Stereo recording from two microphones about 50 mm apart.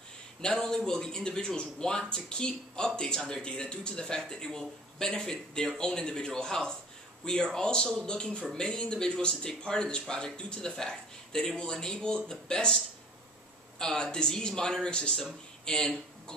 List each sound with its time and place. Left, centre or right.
0.4 s speech: centre